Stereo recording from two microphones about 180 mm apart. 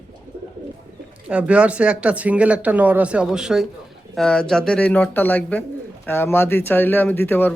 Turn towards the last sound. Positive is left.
turn(degrees=10)  # may be behind; listen again after turning